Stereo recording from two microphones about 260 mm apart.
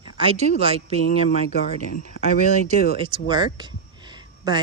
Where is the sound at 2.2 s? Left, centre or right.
Left.